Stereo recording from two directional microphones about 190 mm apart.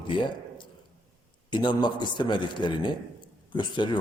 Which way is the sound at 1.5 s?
25° left (ahead or behind).